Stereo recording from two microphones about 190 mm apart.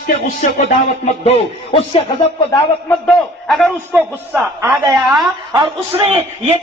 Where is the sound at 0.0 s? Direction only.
40° left (ahead or behind).